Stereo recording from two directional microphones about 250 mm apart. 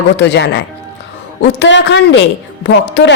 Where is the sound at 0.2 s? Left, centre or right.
Left.